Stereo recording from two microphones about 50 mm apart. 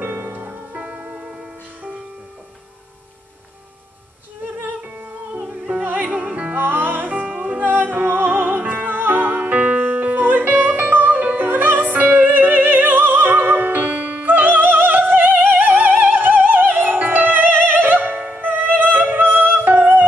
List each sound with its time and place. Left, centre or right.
0.0 s music: right
0.7 s music: right
5.9 s music: right
6.6 s music: right